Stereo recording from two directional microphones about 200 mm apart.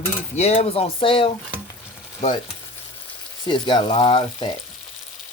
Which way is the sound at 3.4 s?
25° left (ahead or behind).